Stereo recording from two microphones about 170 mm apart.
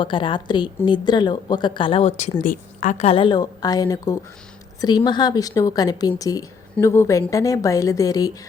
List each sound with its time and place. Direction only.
0.0 s speech: 30° left (ahead or behind)
2.4 s a woman's voice: 50° left (ahead or behind)
3.1 s speech: 30° left (ahead or behind)